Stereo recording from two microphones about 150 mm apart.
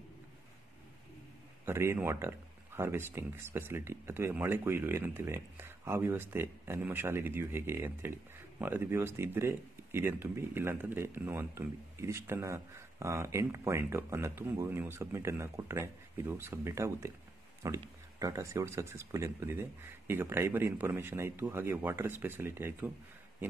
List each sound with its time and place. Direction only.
1.7 s speech: 15° right (ahead or behind)